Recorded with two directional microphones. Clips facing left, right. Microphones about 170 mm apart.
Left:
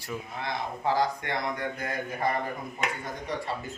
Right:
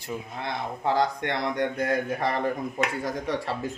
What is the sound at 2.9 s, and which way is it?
Speech, 90° right.